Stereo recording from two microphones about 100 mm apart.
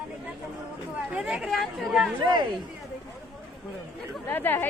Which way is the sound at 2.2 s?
45° right (ahead or behind).